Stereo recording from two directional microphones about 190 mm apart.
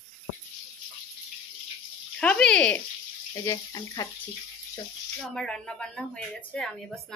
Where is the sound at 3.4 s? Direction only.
15° left (ahead or behind).